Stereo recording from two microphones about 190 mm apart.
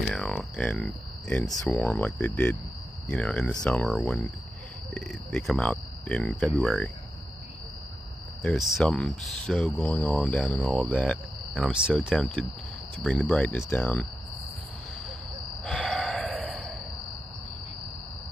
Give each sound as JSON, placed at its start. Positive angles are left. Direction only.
{"t": 0.0, "sound": "speech", "side_deg": 0}
{"t": 8.4, "sound": "speech", "side_deg": 5}
{"t": 15.6, "sound": "sigh", "side_deg": 0}